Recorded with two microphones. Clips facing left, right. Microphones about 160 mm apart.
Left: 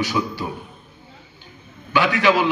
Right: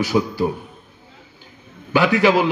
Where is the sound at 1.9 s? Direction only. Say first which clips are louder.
Right 3 dB; 40° right (ahead or behind).